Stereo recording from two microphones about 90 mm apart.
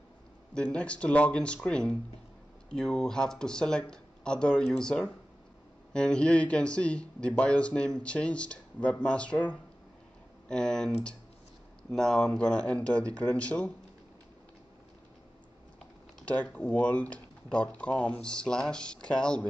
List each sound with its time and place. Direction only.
0.6 s speech: 10° left (ahead or behind)
16.3 s speech: 15° left (ahead or behind)